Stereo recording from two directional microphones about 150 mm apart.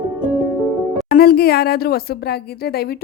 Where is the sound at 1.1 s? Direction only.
90° left.